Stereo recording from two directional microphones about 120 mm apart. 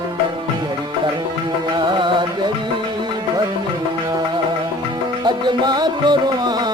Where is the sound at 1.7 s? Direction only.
40° right (ahead or behind).